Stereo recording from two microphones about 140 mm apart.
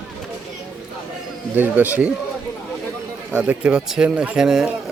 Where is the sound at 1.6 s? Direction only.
15° right (ahead or behind).